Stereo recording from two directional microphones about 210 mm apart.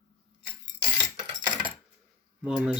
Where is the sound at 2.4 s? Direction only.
5° right (ahead or behind).